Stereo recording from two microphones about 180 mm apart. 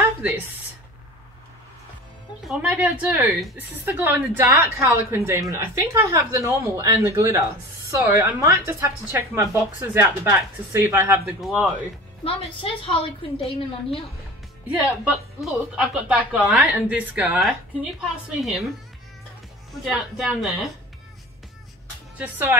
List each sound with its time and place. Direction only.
2.4 s a woman's voice: 5° right (ahead or behind)
11.4 s a woman's voice: centre (ahead or behind)
12.3 s a woman's voice: 30° left (ahead or behind)
14.7 s a woman's voice: 5° right (ahead or behind)
19.8 s a woman's voice: centre (ahead or behind)
22.2 s a woman's voice: 10° right (ahead or behind)